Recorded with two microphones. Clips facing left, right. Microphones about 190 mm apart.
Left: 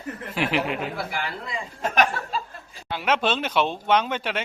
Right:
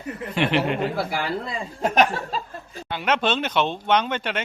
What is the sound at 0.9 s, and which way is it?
Speech, 35° right (ahead or behind).